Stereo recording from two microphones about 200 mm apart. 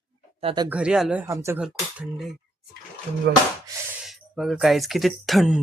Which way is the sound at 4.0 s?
Centre (ahead or behind).